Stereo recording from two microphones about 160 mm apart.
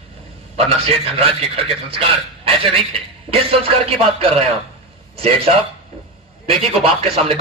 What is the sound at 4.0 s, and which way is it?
Speech, 40° right (ahead or behind).